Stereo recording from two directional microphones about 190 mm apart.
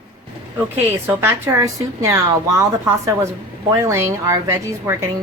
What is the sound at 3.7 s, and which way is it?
A woman's voice, 15° right (ahead or behind).